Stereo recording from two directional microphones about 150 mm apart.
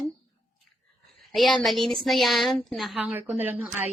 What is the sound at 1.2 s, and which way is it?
A woman's voice, centre (ahead or behind).